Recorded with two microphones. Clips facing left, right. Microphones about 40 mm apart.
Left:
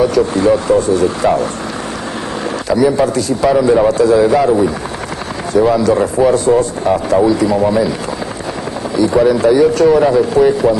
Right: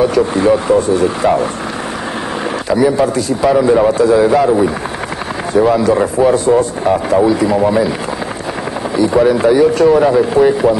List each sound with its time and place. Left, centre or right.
0.1 s speech: right
3.0 s speech: centre
8.9 s speech: right